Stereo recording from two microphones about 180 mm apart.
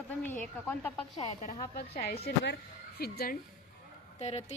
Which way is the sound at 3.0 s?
60° left (ahead or behind).